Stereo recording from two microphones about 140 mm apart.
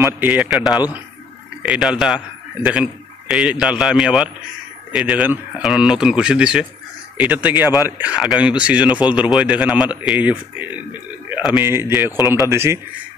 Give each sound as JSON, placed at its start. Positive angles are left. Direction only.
{"t": 0.0, "sound": "a man's voice", "side_deg": -10}
{"t": 12.2, "sound": "speech", "side_deg": 25}
{"t": 12.4, "sound": "a man's voice", "side_deg": -20}